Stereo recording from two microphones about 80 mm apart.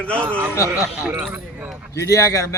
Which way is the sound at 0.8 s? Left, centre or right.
Centre.